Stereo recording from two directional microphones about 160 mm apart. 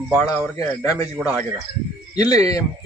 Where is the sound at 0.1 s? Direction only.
10° right (ahead or behind).